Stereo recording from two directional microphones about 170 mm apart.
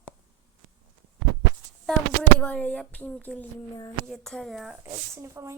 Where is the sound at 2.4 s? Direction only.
5° left (ahead or behind).